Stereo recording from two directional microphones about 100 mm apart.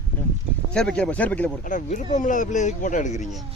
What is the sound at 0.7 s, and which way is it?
Speech, 10° left (ahead or behind).